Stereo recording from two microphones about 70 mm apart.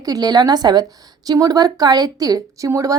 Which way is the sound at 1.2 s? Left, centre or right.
Right.